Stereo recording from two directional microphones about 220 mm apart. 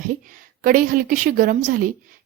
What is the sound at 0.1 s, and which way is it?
A woman's voice, 40° right (ahead or behind).